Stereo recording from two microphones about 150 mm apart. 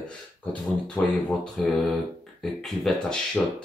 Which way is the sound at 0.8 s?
5° left (ahead or behind).